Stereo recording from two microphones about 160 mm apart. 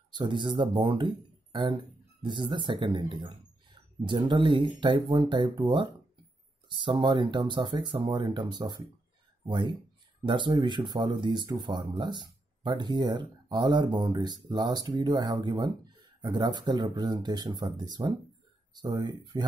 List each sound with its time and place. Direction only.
0.1 s speech: 30° right (ahead or behind)